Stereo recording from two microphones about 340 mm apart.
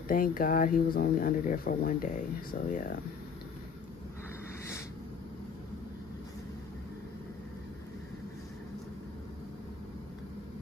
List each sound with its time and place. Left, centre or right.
0.1 s speech: left